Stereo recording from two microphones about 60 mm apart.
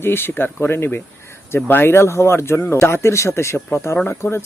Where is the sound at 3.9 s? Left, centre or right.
Left.